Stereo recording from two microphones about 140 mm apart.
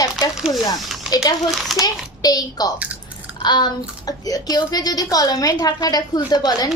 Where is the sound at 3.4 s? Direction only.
30° left (ahead or behind).